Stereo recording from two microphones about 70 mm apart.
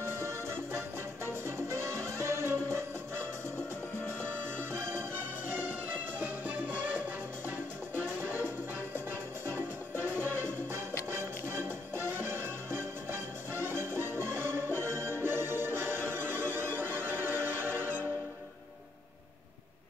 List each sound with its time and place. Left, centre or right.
0.0 s music: right
9.9 s music: right